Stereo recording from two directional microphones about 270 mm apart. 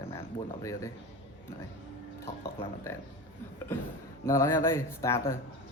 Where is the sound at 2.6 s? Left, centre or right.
Centre.